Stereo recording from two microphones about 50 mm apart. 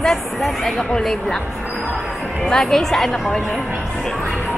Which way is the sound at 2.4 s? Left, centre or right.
Centre.